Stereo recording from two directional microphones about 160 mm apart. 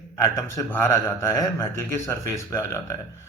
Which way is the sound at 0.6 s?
15° left (ahead or behind).